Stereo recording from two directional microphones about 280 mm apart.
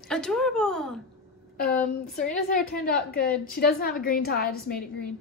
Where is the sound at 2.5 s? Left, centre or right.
Left.